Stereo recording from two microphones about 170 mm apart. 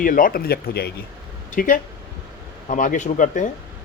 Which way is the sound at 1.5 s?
50° left (ahead or behind).